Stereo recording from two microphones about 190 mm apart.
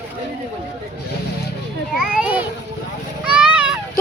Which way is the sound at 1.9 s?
5° right (ahead or behind).